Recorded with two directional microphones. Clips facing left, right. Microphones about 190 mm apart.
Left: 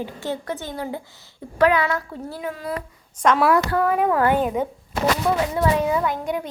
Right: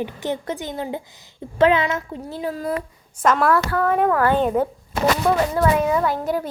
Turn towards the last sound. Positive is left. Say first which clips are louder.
# right 3 dB
turn(degrees=-5)  # may be behind; listen again after turning